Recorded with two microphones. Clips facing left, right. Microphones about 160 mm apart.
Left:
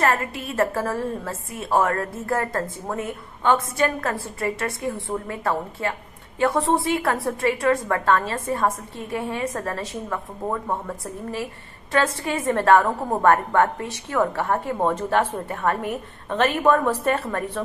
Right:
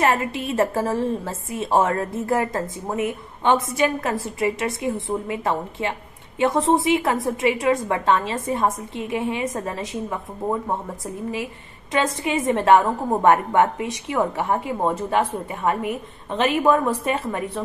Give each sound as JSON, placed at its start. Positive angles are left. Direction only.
{"t": 0.1, "sound": "a woman's voice", "side_deg": -25}
{"t": 11.9, "sound": "a woman's voice", "side_deg": -15}